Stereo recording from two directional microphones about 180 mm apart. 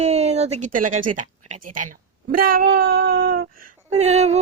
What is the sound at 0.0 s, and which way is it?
Speech, 35° right (ahead or behind).